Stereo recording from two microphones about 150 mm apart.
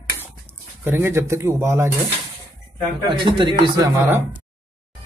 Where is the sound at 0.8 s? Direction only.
15° right (ahead or behind).